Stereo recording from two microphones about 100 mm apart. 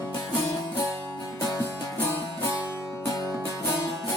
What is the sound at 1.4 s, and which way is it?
Music, 40° left (ahead or behind).